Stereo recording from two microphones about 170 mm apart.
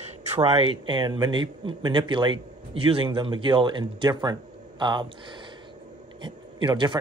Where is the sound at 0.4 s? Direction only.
35° right (ahead or behind).